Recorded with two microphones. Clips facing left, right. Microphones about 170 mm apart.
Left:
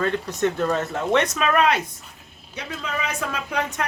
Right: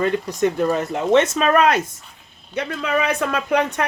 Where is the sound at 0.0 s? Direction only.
15° right (ahead or behind).